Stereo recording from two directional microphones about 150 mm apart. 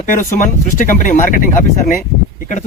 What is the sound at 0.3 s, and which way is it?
A man's voice, 55° left (ahead or behind).